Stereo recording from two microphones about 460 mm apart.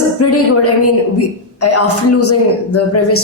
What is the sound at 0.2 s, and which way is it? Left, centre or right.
Speech, left.